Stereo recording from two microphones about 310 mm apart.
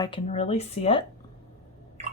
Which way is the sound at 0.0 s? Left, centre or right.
Centre.